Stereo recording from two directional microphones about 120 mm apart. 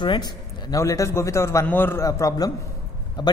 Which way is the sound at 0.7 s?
25° left (ahead or behind).